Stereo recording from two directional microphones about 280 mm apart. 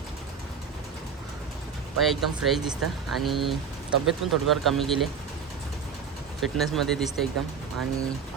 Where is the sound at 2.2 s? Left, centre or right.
Centre.